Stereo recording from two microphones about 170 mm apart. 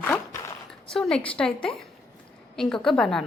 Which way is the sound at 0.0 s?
15° left (ahead or behind).